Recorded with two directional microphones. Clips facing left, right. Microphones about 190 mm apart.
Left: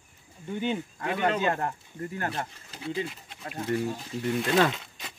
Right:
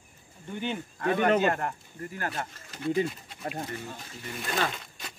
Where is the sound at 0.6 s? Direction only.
15° left (ahead or behind).